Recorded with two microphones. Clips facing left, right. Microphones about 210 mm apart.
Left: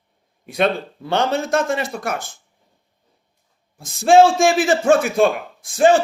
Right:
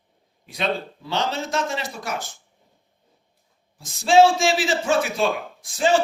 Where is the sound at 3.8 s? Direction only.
50° left (ahead or behind).